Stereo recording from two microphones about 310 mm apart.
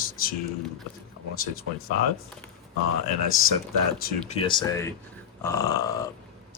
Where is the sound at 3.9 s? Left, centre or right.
Left.